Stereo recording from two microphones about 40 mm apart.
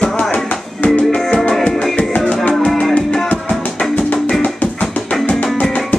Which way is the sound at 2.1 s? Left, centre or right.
Left.